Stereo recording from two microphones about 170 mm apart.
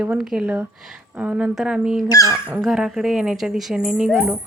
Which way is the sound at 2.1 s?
20° left (ahead or behind).